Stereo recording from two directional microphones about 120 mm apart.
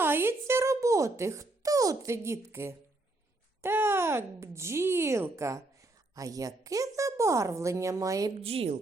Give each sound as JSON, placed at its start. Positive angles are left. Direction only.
{"t": 0.0, "sound": "a sound", "side_deg": -20}
{"t": 3.6, "sound": "a woman's voice", "side_deg": -20}
{"t": 8.4, "sound": "a woman's voice", "side_deg": -55}